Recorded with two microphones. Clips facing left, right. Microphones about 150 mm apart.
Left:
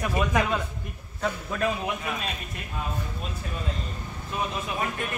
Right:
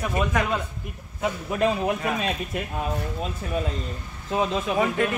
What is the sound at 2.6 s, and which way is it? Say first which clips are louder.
Speech: right 5 dB; 75° right (ahead or behind).